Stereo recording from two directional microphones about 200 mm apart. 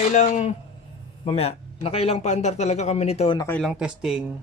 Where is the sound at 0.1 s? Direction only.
35° left (ahead or behind).